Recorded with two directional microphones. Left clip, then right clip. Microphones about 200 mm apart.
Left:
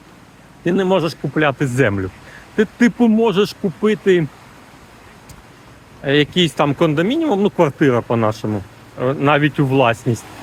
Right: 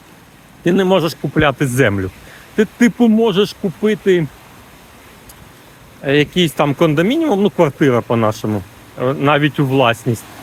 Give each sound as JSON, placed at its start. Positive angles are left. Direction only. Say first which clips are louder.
{"t": 0.6, "sound": "speech", "louder": "right 3 dB", "side_deg": -20}
{"t": 6.1, "sound": "speech", "louder": "right 1 dB", "side_deg": -10}